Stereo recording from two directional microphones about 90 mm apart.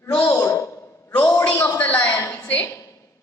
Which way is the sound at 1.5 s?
20° left (ahead or behind).